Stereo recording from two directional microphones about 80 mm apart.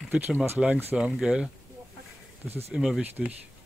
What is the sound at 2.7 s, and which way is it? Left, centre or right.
Speech, centre.